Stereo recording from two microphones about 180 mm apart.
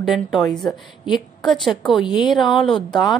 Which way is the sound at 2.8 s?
25° left (ahead or behind).